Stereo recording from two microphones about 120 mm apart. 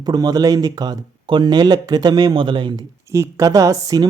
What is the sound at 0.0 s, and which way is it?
Speech, 35° right (ahead or behind).